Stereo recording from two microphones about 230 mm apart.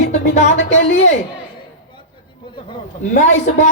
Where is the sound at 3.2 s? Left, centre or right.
Left.